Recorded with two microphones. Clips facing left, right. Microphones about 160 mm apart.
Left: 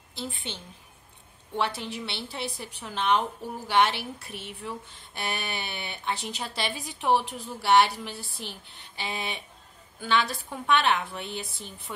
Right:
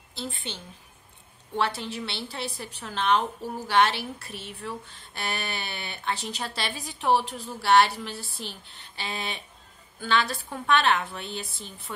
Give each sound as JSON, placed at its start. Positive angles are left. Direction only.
{"t": 0.1, "sound": "speech", "side_deg": 15}
{"t": 1.6, "sound": "speech", "side_deg": 15}